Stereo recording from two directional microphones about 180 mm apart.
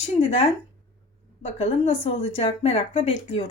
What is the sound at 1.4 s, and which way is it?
A woman's voice, 30° left (ahead or behind).